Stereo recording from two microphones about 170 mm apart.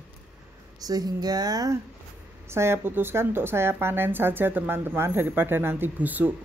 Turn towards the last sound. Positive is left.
turn(degrees=-10)  # may be behind; listen again after turning